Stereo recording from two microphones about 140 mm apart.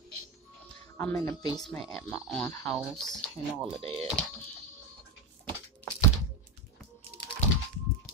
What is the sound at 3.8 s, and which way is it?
Speech, 40° right (ahead or behind).